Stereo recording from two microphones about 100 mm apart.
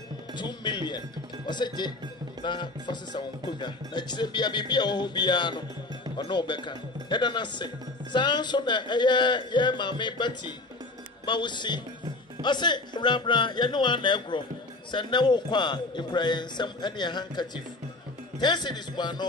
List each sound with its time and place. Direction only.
0.3 s speech: 50° left (ahead or behind)